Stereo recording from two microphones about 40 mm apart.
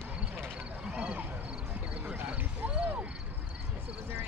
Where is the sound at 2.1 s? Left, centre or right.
Right.